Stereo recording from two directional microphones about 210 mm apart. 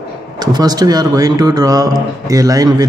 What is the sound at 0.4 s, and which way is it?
Speech, 20° right (ahead or behind).